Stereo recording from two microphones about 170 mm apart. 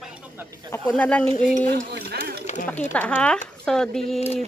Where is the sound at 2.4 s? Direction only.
45° left (ahead or behind).